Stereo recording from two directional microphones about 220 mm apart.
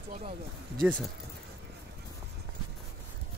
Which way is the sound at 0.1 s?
25° right (ahead or behind).